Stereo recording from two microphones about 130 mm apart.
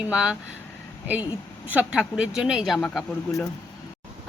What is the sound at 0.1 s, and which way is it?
Speech, 10° right (ahead or behind).